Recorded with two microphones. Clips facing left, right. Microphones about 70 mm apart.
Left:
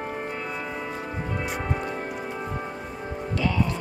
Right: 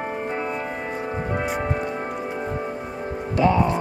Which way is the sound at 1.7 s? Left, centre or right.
Centre.